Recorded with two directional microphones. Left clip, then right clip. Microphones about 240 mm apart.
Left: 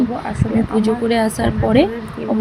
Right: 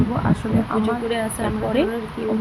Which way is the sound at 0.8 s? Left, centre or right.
Centre.